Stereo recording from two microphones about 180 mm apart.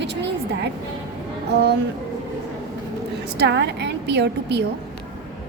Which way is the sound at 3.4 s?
70° right (ahead or behind).